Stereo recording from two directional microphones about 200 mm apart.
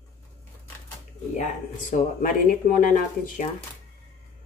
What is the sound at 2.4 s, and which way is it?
A woman's voice, 40° left (ahead or behind).